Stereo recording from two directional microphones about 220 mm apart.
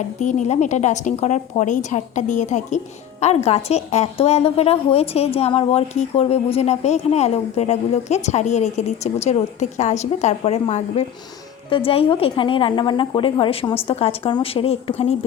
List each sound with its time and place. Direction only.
0.2 s a woman's voice: 35° left (ahead or behind)